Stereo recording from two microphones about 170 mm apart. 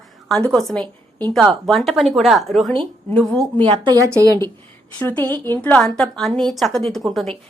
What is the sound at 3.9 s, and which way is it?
Speech, 20° right (ahead or behind).